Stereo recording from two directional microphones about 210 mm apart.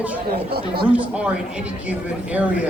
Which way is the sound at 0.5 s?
50° right (ahead or behind).